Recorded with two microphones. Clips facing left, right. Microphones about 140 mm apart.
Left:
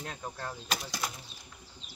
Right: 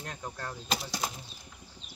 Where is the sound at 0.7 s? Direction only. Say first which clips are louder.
Right 3 dB; 25° right (ahead or behind).